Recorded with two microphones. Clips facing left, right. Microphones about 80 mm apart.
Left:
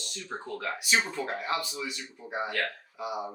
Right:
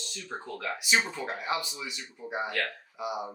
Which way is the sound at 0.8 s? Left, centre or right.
Centre.